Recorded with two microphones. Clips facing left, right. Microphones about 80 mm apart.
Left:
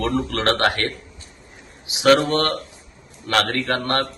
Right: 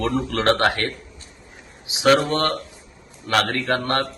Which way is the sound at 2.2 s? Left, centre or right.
Centre.